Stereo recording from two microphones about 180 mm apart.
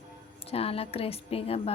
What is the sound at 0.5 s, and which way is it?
Speech, 35° left (ahead or behind).